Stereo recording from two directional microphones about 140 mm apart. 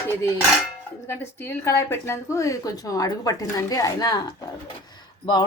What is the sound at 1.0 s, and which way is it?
A woman's voice, 20° left (ahead or behind).